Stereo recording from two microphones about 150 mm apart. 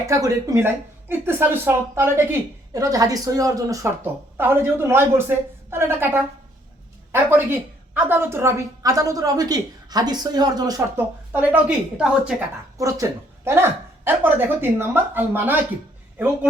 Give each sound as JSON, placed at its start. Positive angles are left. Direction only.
{"t": 0.1, "sound": "a woman's voice", "side_deg": -20}
{"t": 10.9, "sound": "speech", "side_deg": -10}
{"t": 12.7, "sound": "speech", "side_deg": -20}